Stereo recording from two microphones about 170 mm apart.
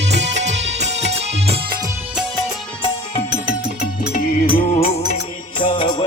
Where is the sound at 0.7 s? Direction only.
40° right (ahead or behind).